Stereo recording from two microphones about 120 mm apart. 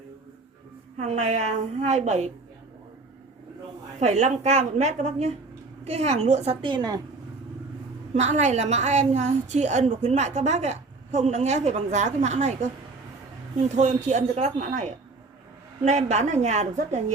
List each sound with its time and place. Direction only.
0.9 s a woman's voice: 75° right (ahead or behind)
4.0 s a woman's voice: 75° right (ahead or behind)
6.7 s a woman's voice: 35° right (ahead or behind)
8.1 s a woman's voice: 75° right (ahead or behind)
15.8 s a woman's voice: 70° right (ahead or behind)